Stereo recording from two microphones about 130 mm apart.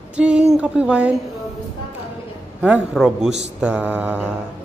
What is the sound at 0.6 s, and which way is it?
Mantra, 10° right (ahead or behind).